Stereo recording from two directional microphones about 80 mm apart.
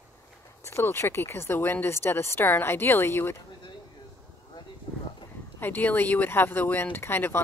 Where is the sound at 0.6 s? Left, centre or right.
Left.